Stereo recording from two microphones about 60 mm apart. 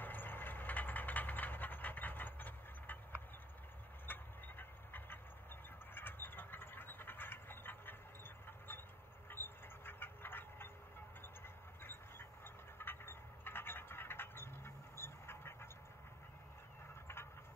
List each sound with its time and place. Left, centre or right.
0.0 s vehicle: left
4.0 s train: left
5.9 s a sound: left
9.3 s a sound: left
11.4 s train: left
12.7 s vehicle: left